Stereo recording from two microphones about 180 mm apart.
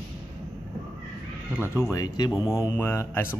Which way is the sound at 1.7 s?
15° left (ahead or behind).